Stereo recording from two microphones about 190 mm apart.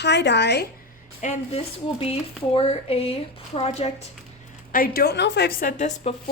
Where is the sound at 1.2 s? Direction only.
35° left (ahead or behind).